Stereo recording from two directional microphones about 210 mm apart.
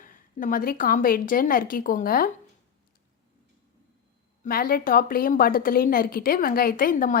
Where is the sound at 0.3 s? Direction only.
40° left (ahead or behind).